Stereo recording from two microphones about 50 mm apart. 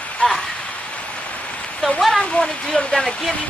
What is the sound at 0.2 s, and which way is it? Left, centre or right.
Speech, left.